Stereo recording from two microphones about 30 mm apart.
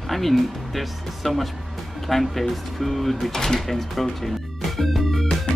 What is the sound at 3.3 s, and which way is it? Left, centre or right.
Speech, centre.